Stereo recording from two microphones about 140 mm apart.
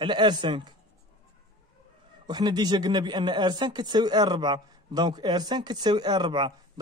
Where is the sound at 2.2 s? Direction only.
30° right (ahead or behind).